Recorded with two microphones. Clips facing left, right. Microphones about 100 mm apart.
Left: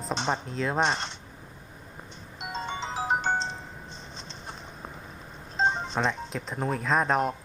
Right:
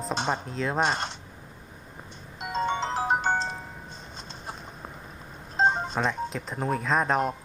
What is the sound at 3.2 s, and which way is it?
Music, 45° right (ahead or behind).